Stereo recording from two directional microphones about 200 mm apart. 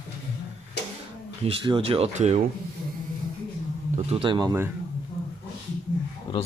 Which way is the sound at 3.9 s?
25° right (ahead or behind).